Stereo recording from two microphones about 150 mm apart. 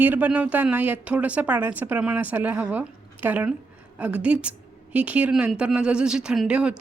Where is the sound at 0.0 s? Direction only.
10° right (ahead or behind).